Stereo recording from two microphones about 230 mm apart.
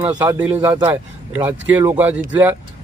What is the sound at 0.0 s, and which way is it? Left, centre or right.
Speech, centre.